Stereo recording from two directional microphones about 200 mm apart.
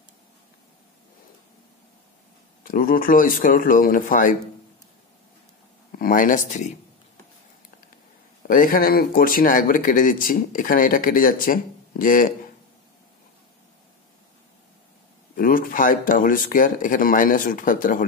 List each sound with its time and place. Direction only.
2.6 s speech: 45° left (ahead or behind)
5.9 s speech: 45° left (ahead or behind)
8.5 s speech: 45° left (ahead or behind)
15.3 s speech: 45° left (ahead or behind)